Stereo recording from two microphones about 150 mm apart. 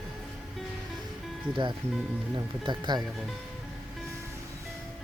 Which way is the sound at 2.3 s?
30° right (ahead or behind).